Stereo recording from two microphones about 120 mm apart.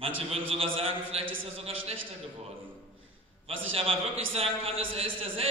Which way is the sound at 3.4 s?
55° right (ahead or behind).